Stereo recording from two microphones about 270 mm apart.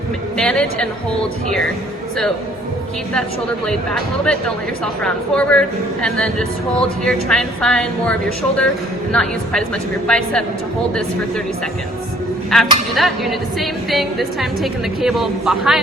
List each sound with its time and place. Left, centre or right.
0.3 s speech: centre
3.7 s speech: centre
9.1 s speech: centre
12.5 s speech: centre